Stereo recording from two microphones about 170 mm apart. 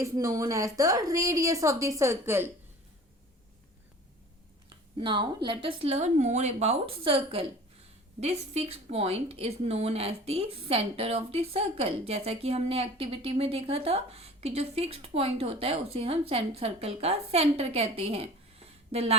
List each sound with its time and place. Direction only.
0.0 s a woman's voice: 20° right (ahead or behind)
4.9 s a woman's voice: 30° right (ahead or behind)